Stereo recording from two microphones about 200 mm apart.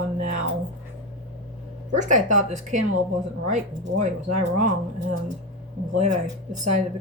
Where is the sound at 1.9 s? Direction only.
40° right (ahead or behind).